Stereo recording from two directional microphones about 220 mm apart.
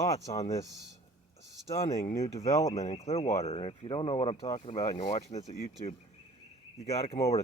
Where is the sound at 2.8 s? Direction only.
30° left (ahead or behind).